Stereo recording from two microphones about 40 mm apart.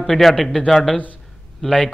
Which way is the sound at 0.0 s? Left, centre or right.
Centre.